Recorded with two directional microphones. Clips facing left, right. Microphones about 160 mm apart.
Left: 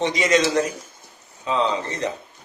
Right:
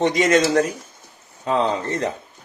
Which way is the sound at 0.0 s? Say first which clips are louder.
Right 3 dB; 50° right (ahead or behind).